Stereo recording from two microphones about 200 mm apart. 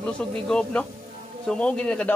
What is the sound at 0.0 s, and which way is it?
Speech, 5° left (ahead or behind).